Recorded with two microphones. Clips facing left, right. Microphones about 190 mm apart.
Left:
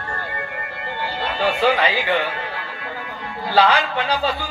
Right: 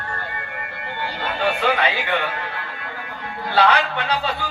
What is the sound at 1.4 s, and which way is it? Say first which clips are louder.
Speech: left 2 dB; 60° right (ahead or behind).